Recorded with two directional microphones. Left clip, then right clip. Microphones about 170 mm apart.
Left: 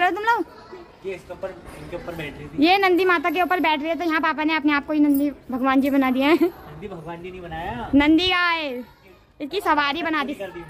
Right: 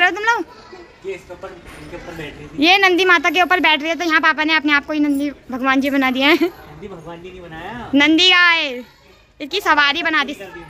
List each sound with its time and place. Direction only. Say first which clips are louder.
0.0 s a sound: right 4 dB; 15° left (ahead or behind)
2.6 s speech: right 5 dB; 5° left (ahead or behind)
7.9 s speech: right 6 dB; 5° left (ahead or behind)